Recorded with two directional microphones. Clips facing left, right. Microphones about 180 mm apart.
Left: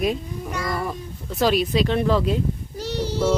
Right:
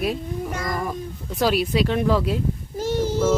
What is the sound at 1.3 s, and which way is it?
Speech, 10° right (ahead or behind).